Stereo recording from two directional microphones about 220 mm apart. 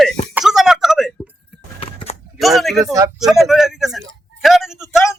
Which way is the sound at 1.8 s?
25° left (ahead or behind).